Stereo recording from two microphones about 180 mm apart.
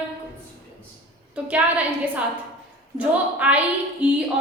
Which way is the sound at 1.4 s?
10° right (ahead or behind).